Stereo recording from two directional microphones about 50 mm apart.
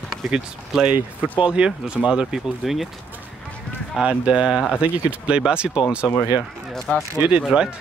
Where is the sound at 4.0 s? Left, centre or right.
Right.